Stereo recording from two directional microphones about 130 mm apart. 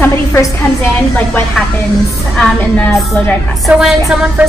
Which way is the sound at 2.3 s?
10° left (ahead or behind).